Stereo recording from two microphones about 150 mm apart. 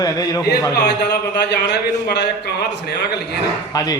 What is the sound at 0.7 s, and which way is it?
A man's voice, 90° left.